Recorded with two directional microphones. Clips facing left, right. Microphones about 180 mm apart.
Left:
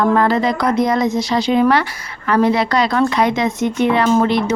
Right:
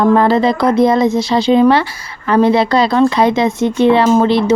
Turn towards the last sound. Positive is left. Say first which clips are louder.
# right 4 dB
turn(degrees=-30)  # may be behind; listen again after turning